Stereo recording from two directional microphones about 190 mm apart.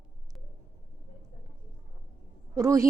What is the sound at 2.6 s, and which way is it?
Speech, 15° right (ahead or behind).